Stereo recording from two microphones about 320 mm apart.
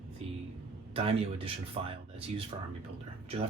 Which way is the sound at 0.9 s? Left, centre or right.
Centre.